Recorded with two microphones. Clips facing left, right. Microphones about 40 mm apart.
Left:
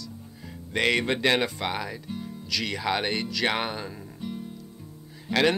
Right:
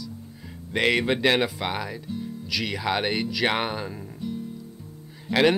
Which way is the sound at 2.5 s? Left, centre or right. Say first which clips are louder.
Right 1 dB; centre.